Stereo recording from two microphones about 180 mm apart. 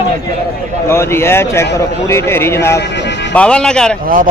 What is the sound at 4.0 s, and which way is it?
Speech, 50° right (ahead or behind).